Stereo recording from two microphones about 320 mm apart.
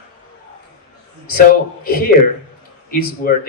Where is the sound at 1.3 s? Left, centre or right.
Left.